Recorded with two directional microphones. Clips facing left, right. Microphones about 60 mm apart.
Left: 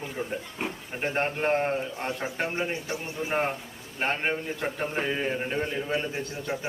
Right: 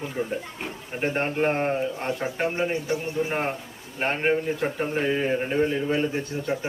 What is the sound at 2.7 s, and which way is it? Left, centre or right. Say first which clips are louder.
Speech: right 6 dB; right.